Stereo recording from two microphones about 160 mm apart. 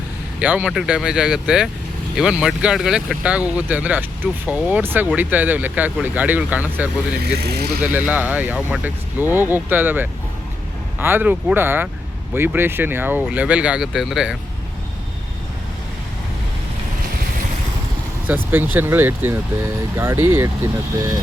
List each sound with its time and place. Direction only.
0.3 s speech: 10° right (ahead or behind)
7.3 s speech: 80° right
7.8 s speech: 10° right (ahead or behind)
18.5 s speech: 10° right (ahead or behind)